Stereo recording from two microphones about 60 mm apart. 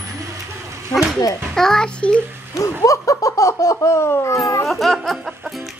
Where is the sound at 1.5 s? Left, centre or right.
Centre.